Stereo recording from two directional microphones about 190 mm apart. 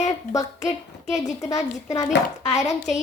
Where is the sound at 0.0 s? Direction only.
20° left (ahead or behind).